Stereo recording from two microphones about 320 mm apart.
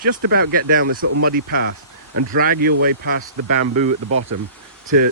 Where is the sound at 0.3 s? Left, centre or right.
Right.